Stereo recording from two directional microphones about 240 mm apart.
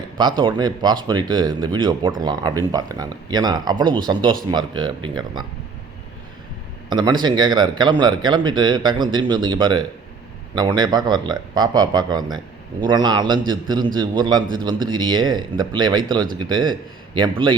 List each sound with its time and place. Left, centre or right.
0.2 s speech: centre
6.9 s speech: centre